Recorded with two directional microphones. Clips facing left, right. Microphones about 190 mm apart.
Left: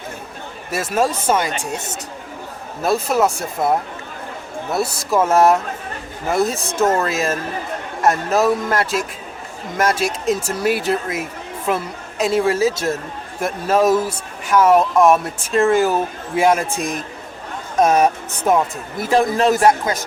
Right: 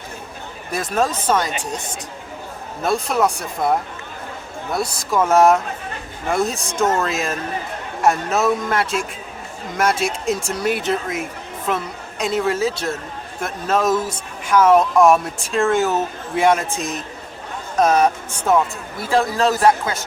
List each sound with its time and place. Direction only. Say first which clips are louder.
0.7 s speech: left 1 dB; 5° left (ahead or behind)
2.8 s a man's voice: left 2 dB; 5° left (ahead or behind)